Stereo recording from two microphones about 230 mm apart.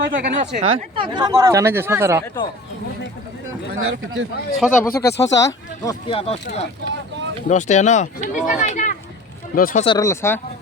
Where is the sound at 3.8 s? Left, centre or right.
Right.